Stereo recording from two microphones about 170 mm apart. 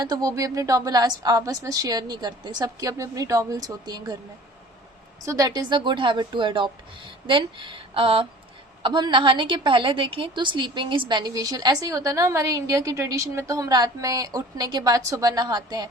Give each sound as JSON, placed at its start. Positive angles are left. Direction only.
{"t": 0.0, "sound": "a woman's voice", "side_deg": -20}
{"t": 5.2, "sound": "a woman's voice", "side_deg": -20}